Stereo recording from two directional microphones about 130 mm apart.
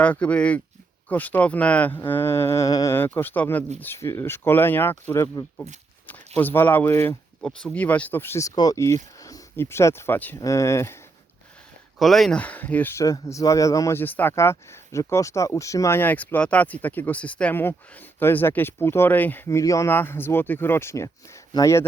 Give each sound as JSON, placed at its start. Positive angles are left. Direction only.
{"t": 0.0, "sound": "speech", "side_deg": 10}
{"t": 2.0, "sound": "mantra", "side_deg": 15}
{"t": 2.9, "sound": "speech", "side_deg": 15}
{"t": 7.4, "sound": "speech", "side_deg": 10}
{"t": 10.4, "sound": "mantra", "side_deg": 25}
{"t": 11.9, "sound": "speech", "side_deg": 0}
{"t": 21.5, "sound": "mantra", "side_deg": 25}